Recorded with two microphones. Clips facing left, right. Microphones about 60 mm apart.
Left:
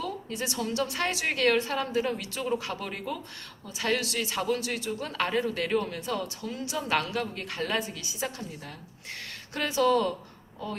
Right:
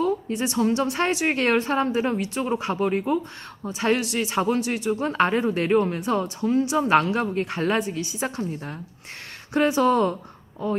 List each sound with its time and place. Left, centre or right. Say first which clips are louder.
0.0 s a woman's voice: right 9 dB; right